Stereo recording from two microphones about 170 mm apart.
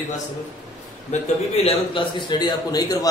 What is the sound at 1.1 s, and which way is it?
A man's voice, 35° left (ahead or behind).